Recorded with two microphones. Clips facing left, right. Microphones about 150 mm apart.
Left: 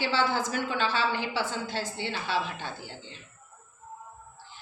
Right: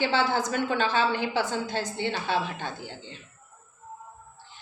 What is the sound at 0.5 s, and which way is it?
Speech, 55° right (ahead or behind).